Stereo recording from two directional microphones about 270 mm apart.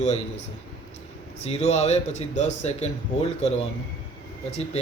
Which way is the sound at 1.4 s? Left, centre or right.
Left.